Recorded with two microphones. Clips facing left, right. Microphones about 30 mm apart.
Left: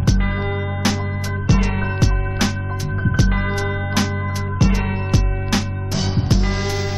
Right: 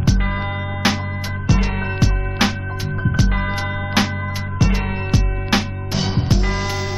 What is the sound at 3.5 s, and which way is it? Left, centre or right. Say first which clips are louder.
Music: right 1 dB; right.